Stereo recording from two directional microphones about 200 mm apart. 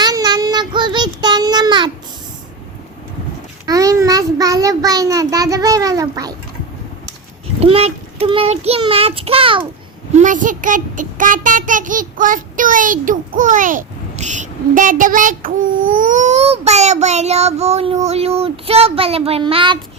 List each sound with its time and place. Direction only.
0.0 s child singing: 20° right (ahead or behind)
3.7 s child singing: 15° right (ahead or behind)
7.6 s a child's voice: 30° right (ahead or behind)
10.1 s a child's voice: 40° right (ahead or behind)